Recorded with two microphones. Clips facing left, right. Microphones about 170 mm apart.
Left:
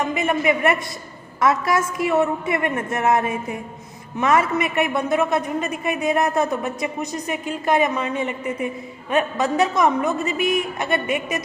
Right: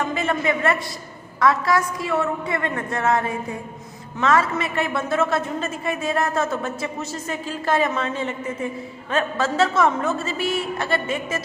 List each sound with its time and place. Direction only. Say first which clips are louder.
0.0 s a man's voice: left 2 dB; 20° left (ahead or behind)